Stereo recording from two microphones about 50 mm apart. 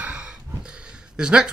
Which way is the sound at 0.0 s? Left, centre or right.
Right.